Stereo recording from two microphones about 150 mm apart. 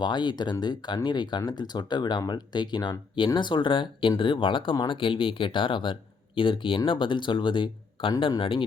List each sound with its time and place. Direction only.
0.0 s speech: 30° left (ahead or behind)